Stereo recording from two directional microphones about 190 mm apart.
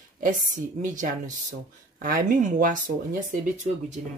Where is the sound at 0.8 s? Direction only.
45° right (ahead or behind).